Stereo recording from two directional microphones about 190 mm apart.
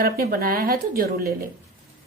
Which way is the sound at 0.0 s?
50° right (ahead or behind).